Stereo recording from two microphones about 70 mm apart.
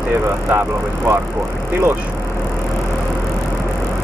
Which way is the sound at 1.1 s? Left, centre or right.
Right.